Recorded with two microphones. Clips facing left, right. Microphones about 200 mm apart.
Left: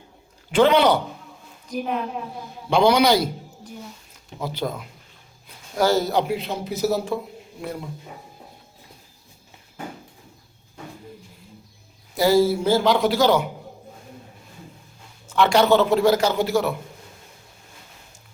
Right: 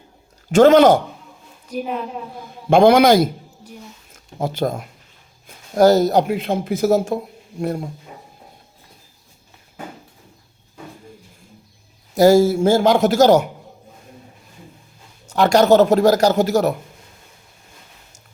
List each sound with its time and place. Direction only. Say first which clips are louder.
0.5 s speech: right 6 dB; 45° right (ahead or behind)
1.7 s a woman's voice: right 1 dB; centre (ahead or behind)
2.6 s speech: right 6 dB; 50° right (ahead or behind)
12.1 s speech: right 5 dB; 45° right (ahead or behind)
15.3 s speech: right 4 dB; 40° right (ahead or behind)